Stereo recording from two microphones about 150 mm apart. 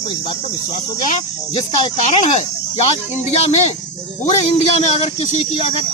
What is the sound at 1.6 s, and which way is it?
Speech, 45° left (ahead or behind).